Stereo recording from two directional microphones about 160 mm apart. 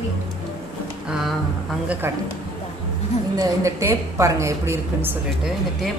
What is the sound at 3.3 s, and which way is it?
A woman's voice, 20° right (ahead or behind).